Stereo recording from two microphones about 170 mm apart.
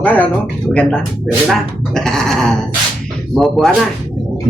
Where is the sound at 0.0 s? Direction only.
10° left (ahead or behind).